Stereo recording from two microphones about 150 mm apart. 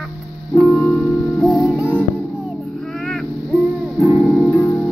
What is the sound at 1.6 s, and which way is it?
Music, 10° right (ahead or behind).